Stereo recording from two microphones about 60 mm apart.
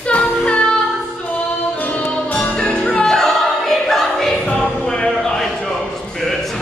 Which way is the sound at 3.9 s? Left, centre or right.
Centre.